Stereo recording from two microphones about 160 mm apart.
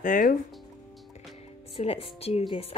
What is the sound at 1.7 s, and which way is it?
Speech, 40° left (ahead or behind).